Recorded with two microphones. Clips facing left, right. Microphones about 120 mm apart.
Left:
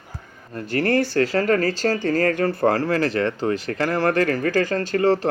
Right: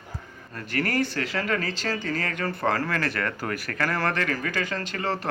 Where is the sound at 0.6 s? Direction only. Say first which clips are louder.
Left 6 dB; 30° left (ahead or behind).